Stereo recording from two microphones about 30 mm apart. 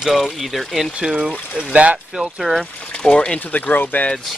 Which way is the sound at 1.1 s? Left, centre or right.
Right.